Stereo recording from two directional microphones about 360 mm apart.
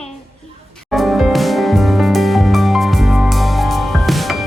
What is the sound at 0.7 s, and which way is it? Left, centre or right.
Music, centre.